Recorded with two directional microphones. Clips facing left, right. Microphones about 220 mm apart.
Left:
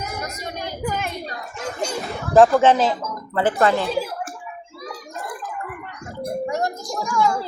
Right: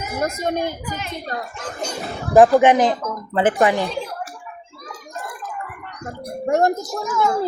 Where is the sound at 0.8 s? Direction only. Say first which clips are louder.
Left 4 dB; 55° left (ahead or behind).